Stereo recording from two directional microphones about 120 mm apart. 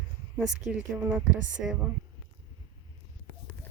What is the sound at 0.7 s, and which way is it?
A woman's voice, 15° right (ahead or behind).